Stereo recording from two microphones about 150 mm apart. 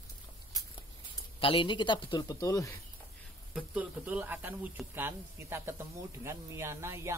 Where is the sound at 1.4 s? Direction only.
35° left (ahead or behind).